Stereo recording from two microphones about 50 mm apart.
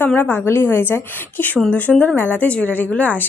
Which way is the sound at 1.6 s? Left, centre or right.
Left.